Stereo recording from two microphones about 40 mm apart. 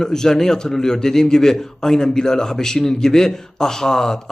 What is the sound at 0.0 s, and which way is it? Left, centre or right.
A man's voice, centre.